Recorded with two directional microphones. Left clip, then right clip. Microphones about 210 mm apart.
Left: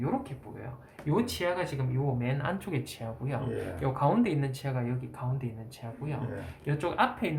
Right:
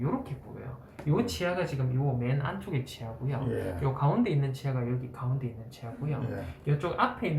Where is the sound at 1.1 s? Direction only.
45° left (ahead or behind).